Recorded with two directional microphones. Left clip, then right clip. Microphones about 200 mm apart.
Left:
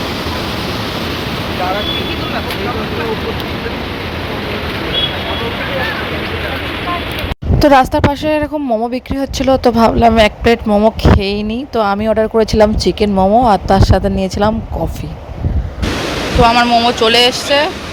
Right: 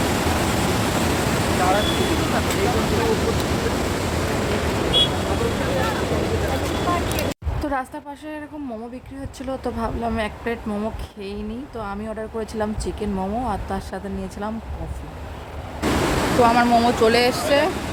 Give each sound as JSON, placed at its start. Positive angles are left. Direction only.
{"t": 7.6, "sound": "speech", "side_deg": 45}
{"t": 16.4, "sound": "speech", "side_deg": 5}